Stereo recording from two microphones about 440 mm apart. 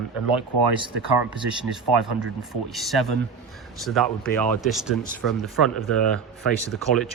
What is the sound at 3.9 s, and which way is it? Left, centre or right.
Speech, centre.